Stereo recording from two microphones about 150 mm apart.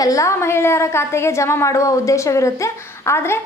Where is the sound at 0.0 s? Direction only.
20° left (ahead or behind).